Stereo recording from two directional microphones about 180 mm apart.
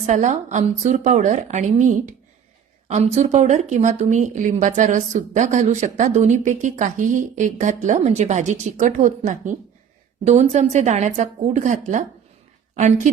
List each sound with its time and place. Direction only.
0.0 s a woman's voice: 40° right (ahead or behind)